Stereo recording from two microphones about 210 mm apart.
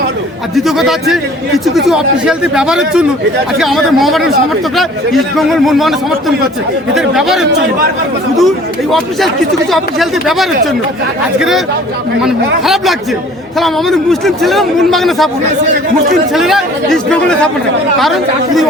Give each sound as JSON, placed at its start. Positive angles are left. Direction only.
{"t": 0.5, "sound": "a man's voice", "side_deg": 0}
{"t": 16.3, "sound": "a man's voice", "side_deg": 0}